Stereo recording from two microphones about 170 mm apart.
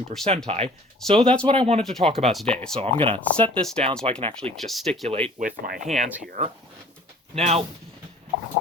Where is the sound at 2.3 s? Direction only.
5° left (ahead or behind).